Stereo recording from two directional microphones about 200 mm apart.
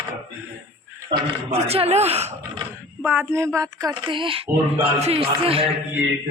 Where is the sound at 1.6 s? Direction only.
30° right (ahead or behind).